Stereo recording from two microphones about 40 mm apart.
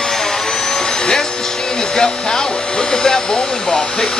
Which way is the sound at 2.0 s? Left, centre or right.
Centre.